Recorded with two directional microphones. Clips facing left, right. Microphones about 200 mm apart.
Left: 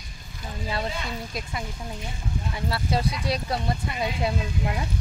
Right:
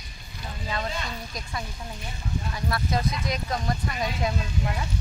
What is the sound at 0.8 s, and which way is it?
Speech, 10° left (ahead or behind).